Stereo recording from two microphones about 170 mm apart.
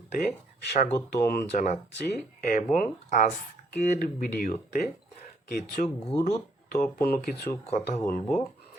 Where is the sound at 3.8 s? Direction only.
55° left (ahead or behind).